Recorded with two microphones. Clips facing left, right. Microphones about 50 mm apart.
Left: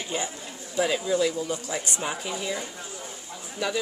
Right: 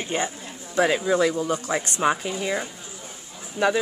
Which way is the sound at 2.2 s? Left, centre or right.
Right.